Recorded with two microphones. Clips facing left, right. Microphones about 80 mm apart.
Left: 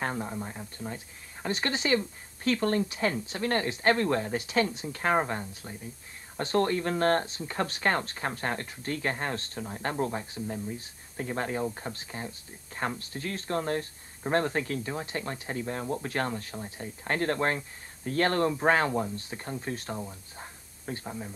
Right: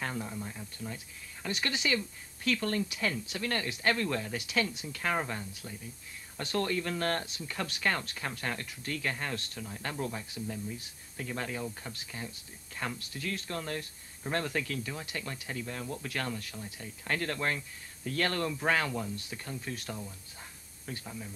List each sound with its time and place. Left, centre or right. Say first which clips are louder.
0.0 s speech: left 4 dB; left